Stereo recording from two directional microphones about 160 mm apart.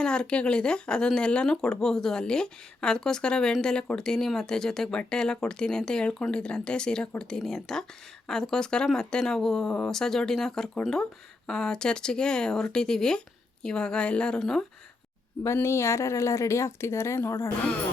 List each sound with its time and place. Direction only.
0.0 s speech: 5° left (ahead or behind)
15.4 s speech: 15° left (ahead or behind)